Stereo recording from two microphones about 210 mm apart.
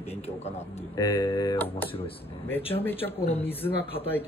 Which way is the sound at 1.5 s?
10° left (ahead or behind).